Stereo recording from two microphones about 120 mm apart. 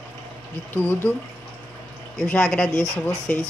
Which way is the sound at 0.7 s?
15° left (ahead or behind).